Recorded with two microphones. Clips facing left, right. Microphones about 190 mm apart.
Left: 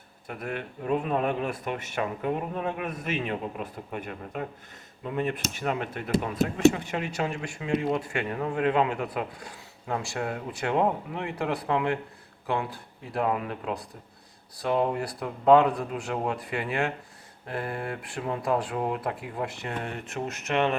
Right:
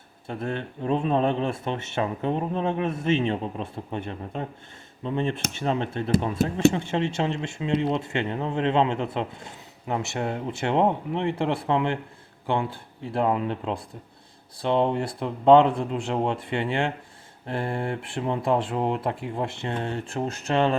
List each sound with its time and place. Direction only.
0.3 s speech: 30° right (ahead or behind)